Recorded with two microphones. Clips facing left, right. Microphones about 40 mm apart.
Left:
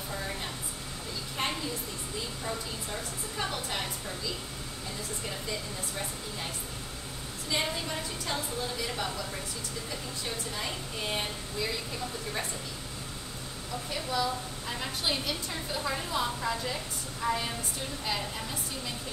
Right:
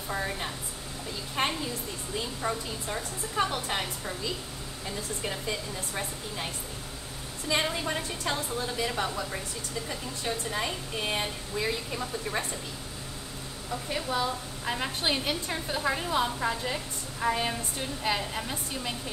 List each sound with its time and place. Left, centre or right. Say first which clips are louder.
2.4 s a woman's voice: right 4 dB; right
7.4 s a woman's voice: right 4 dB; right
8.8 s a woman's voice: right 4 dB; right
11.1 s a woman's voice: right 2 dB; right
13.9 s a woman's voice: right 1 dB; right